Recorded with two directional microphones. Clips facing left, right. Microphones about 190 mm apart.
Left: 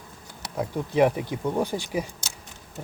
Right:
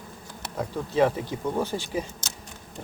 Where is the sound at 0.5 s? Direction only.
15° left (ahead or behind).